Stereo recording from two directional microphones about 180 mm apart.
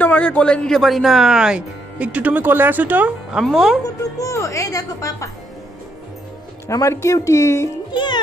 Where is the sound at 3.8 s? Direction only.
15° left (ahead or behind).